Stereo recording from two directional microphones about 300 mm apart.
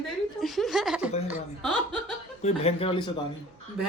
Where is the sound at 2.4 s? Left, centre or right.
Centre.